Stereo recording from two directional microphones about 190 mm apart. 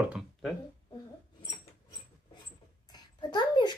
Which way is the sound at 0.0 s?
Centre (ahead or behind).